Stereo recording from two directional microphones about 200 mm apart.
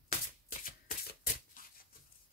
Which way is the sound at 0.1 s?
45° left (ahead or behind).